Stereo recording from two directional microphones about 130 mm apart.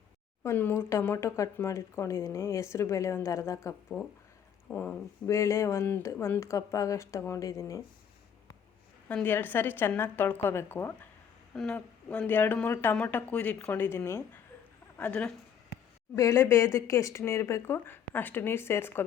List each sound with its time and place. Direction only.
0.4 s speech: 15° left (ahead or behind)
9.0 s speech: 15° left (ahead or behind)
11.5 s speech: 5° left (ahead or behind)
16.1 s speech: 25° left (ahead or behind)